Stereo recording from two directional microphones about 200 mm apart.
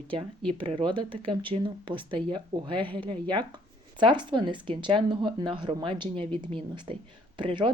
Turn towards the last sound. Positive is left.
turn(degrees=-25)  # may be behind; listen again after turning